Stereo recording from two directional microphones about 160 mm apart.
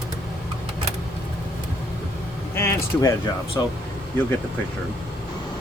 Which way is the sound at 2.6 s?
15° left (ahead or behind).